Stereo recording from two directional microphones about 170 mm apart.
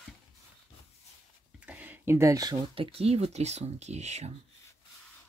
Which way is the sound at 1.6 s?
10° right (ahead or behind).